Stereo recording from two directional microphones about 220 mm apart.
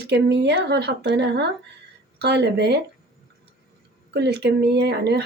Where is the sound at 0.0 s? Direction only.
50° right (ahead or behind).